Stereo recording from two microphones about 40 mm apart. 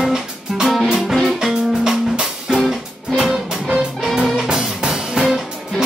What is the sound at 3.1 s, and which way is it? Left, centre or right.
Music, centre.